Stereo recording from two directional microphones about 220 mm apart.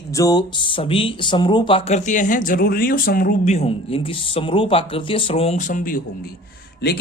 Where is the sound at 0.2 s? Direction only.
15° left (ahead or behind).